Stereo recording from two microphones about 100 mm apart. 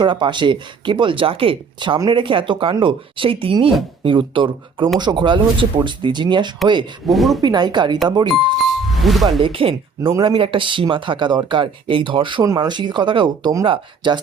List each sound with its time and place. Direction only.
0.0 s speech: 55° right (ahead or behind)
7.1 s a woman's voice: centre (ahead or behind)
7.4 s speech: 45° right (ahead or behind)
8.5 s music: centre (ahead or behind)
9.4 s speech: 65° right (ahead or behind)
10.0 s speech: 25° right (ahead or behind)
10.2 s speech: 60° right (ahead or behind)
12.4 s speech: 45° right (ahead or behind)